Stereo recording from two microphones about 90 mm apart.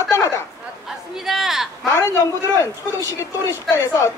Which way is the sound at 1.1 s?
5° right (ahead or behind).